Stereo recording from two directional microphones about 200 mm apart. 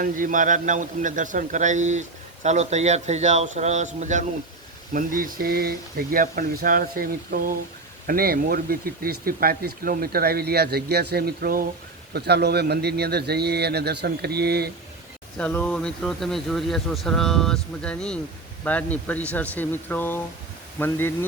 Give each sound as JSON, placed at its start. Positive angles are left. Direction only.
{"t": 0.0, "sound": "a man's voice", "side_deg": -40}
{"t": 15.4, "sound": "speech", "side_deg": 5}